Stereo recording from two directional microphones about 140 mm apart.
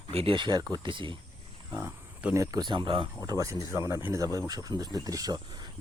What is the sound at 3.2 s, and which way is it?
Speech, 25° right (ahead or behind).